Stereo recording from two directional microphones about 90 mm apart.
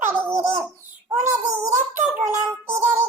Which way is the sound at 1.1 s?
30° right (ahead or behind).